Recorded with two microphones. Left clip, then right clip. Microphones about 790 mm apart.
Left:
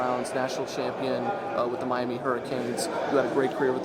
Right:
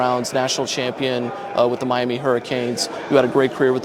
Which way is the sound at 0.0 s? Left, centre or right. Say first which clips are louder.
Right 8 dB; right.